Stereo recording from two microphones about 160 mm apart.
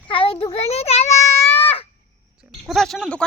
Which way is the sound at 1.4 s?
15° left (ahead or behind).